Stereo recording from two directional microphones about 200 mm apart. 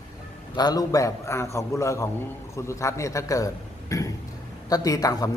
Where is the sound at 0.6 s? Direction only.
20° left (ahead or behind).